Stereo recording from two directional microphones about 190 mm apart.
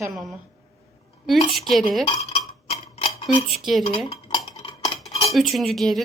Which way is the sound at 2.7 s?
35° left (ahead or behind).